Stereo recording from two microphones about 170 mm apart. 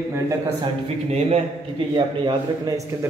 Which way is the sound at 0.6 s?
35° right (ahead or behind).